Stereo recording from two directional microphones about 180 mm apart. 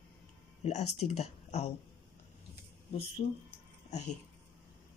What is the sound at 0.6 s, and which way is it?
Speech, 35° left (ahead or behind).